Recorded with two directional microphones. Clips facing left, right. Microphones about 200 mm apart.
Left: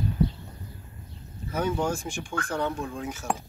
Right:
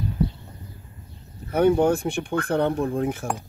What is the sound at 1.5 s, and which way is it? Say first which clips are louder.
Speech: right 9 dB; 60° right (ahead or behind).